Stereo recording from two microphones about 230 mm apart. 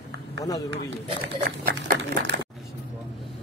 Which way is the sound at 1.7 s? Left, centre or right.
Right.